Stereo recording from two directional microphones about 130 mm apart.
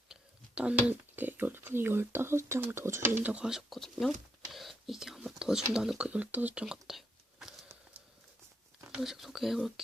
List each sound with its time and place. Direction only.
0.1 s speech: 10° right (ahead or behind)
4.5 s whispering: centre (ahead or behind)
5.7 s speech: 5° right (ahead or behind)
9.0 s speech: centre (ahead or behind)